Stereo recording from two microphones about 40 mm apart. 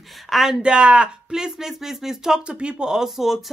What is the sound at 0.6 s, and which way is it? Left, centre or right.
Speech, right.